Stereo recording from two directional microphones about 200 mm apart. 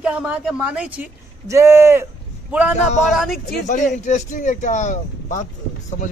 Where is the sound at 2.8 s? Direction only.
35° left (ahead or behind).